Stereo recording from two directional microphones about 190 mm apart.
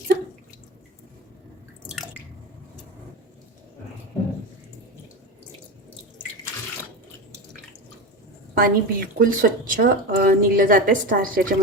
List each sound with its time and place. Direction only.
8.5 s speech: 50° right (ahead or behind)